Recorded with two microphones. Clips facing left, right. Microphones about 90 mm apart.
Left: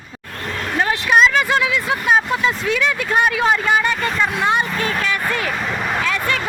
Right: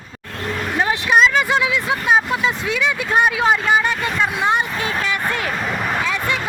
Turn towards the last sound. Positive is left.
turn(degrees=-5)  # may be behind; listen again after turning